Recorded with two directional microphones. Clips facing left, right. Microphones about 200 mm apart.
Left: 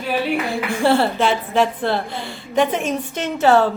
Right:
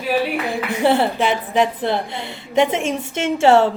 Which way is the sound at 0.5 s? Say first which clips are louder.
Right 1 dB; 20° right (ahead or behind).